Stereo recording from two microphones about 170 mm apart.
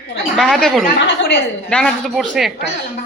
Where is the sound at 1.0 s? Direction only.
90° left.